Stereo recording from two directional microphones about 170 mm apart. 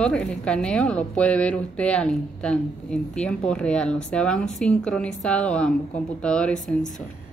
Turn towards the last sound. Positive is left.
turn(degrees=5)  # may be behind; listen again after turning